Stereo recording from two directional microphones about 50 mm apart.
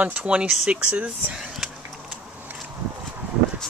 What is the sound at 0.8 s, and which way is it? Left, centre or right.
Speech, right.